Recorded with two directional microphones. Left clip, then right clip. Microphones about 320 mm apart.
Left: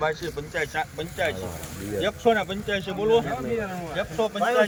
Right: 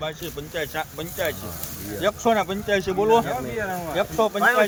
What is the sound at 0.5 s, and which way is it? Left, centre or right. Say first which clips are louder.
Speech: even; centre.